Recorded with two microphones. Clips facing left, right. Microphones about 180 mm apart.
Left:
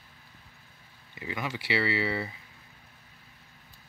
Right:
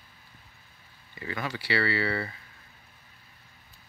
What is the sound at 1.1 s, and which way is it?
Speech, 15° left (ahead or behind).